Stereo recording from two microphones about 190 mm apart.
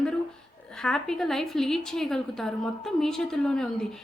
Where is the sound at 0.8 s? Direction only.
5° left (ahead or behind).